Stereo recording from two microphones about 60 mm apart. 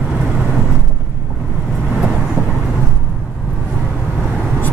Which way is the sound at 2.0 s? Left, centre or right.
Centre.